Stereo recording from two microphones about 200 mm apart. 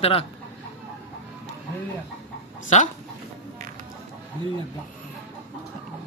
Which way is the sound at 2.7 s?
35° left (ahead or behind).